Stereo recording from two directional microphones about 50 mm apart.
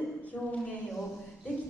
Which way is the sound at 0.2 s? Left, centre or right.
Left.